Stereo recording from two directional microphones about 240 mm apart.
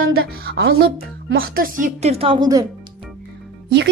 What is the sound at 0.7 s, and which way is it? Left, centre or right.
A woman's voice, right.